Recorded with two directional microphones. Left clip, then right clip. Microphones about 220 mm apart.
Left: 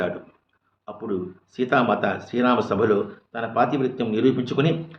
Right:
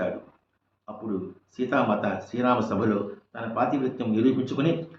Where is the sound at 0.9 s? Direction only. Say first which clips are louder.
Left 3 dB; 50° left (ahead or behind).